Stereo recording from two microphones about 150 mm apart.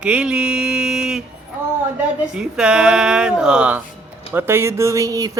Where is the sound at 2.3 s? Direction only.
5° right (ahead or behind).